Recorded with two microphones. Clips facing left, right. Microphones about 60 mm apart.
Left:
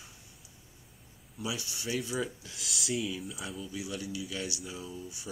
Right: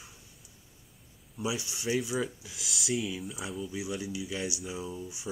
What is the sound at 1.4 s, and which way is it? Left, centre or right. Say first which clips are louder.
Speech: right 4 dB; right.